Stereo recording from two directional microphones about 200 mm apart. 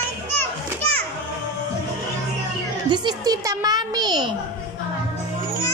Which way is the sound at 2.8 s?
20° right (ahead or behind).